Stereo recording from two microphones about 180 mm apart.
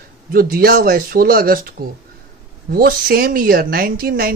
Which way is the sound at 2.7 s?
55° right (ahead or behind).